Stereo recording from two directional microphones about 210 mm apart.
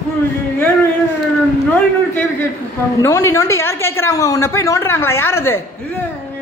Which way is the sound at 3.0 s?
15° left (ahead or behind).